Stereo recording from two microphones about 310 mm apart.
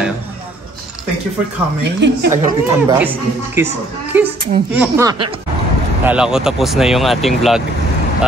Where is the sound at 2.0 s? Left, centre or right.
Right.